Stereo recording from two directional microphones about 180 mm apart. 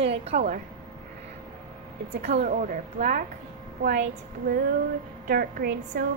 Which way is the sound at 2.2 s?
40° right (ahead or behind).